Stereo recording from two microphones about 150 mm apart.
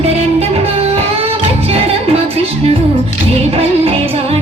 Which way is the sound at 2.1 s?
40° right (ahead or behind).